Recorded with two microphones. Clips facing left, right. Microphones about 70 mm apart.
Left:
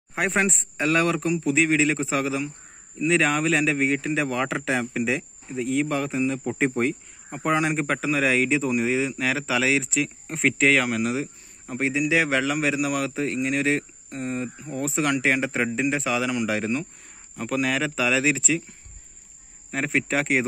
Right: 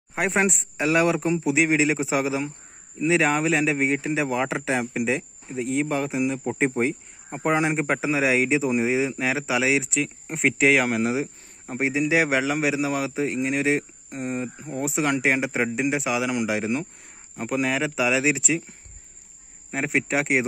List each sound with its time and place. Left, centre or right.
0.1 s speech: centre
8.6 s speech: centre
10.8 s speech: right; by 18.6 s centre
19.7 s speech: centre